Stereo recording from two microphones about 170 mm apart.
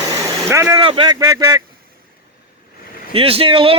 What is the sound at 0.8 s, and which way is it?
Speech, 30° right (ahead or behind).